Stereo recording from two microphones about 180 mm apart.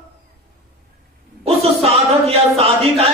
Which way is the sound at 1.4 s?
35° right (ahead or behind).